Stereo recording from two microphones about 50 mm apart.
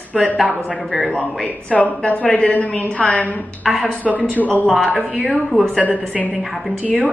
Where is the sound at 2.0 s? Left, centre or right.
Left.